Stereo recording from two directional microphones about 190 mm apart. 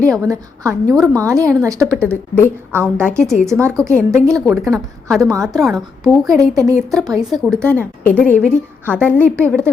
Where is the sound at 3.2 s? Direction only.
Centre (ahead or behind).